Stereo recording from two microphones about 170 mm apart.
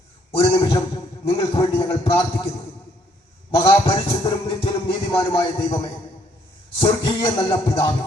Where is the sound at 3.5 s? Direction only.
20° left (ahead or behind).